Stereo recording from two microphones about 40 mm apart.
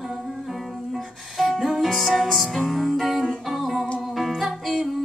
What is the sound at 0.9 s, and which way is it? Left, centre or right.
Music, centre.